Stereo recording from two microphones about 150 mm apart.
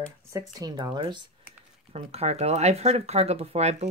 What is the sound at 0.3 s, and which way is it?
Speech, 20° right (ahead or behind).